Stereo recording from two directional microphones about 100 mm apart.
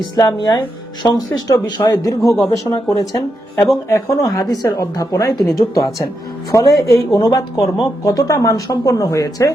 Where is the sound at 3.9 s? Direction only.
30° left (ahead or behind).